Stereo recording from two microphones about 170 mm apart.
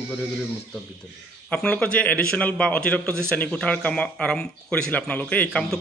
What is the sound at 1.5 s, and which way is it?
A man's voice, 5° left (ahead or behind).